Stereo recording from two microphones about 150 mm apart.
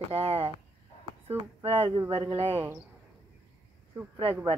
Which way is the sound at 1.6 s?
35° right (ahead or behind).